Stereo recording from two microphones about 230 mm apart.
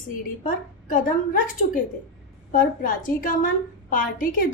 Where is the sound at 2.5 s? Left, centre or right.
Left.